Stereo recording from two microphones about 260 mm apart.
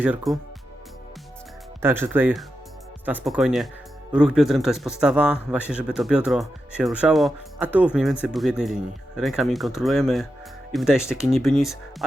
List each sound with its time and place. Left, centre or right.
0.0 s a man's voice: centre
1.8 s a man's voice: centre